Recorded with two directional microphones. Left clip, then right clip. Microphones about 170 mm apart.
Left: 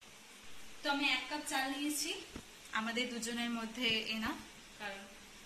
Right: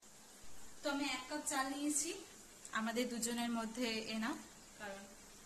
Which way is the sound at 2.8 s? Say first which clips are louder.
Left 2 dB; 65° right (ahead or behind).